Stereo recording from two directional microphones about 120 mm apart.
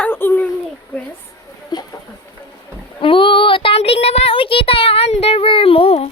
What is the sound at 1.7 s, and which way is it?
Speech, 35° left (ahead or behind).